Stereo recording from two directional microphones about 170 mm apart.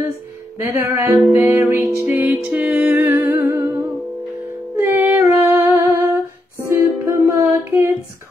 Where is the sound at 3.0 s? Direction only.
15° right (ahead or behind).